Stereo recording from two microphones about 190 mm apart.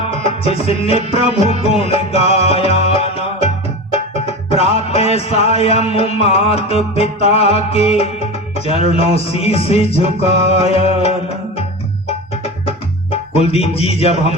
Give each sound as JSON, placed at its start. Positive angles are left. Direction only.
{"t": 0.2, "sound": "music", "side_deg": 30}
{"t": 12.6, "sound": "music", "side_deg": 30}